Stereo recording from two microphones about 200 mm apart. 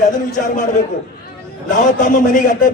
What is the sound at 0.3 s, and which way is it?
Speech, 40° left (ahead or behind).